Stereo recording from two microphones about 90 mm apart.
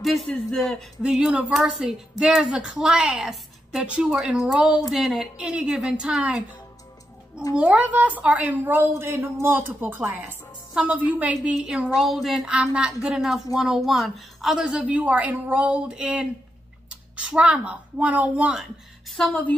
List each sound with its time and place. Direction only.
0.0 s a woman's voice: centre (ahead or behind)
1.0 s a woman's voice: 10° right (ahead or behind)
7.5 s a woman's voice: 15° right (ahead or behind)
10.7 s a woman's voice: 10° right (ahead or behind)